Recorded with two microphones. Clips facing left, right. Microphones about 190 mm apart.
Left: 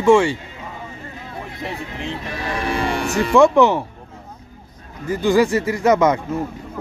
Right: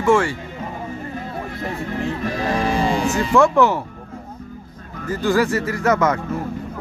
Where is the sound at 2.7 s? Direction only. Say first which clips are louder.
Right 2 dB; 65° left (ahead or behind).